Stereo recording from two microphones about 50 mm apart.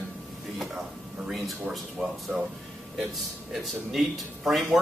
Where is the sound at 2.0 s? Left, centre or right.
Centre.